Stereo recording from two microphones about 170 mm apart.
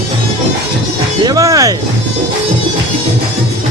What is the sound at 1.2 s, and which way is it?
Music, 20° right (ahead or behind).